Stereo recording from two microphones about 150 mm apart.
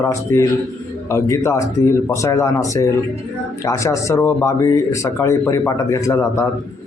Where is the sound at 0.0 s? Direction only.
20° left (ahead or behind).